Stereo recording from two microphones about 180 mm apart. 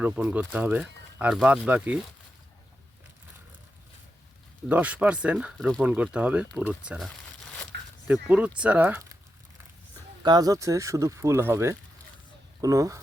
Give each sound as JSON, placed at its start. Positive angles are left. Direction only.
{"t": 0.0, "sound": "speech", "side_deg": -10}
{"t": 4.7, "sound": "speech", "side_deg": -10}
{"t": 10.2, "sound": "speech", "side_deg": -20}